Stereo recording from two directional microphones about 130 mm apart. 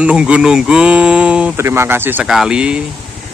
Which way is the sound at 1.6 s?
20° right (ahead or behind).